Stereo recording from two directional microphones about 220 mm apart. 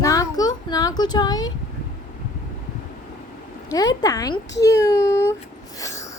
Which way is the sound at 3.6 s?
15° left (ahead or behind).